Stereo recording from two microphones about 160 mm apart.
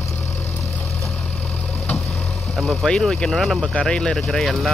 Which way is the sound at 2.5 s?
Centre (ahead or behind).